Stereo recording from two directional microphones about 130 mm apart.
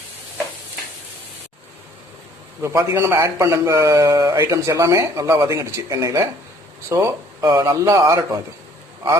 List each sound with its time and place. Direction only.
2.6 s speech: 20° right (ahead or behind)